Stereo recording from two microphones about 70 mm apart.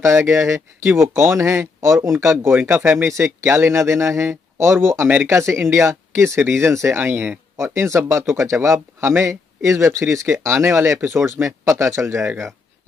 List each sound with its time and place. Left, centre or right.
0.0 s speech: right
2.6 s speech: right
5.3 s speech: right